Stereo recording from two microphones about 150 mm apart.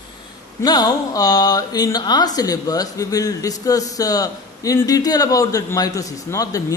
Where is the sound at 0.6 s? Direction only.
25° left (ahead or behind).